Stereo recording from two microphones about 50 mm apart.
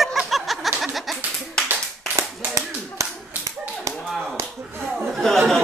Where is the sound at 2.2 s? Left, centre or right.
Right.